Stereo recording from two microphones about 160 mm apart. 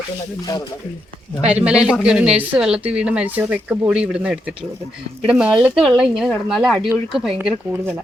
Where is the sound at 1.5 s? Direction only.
5° right (ahead or behind).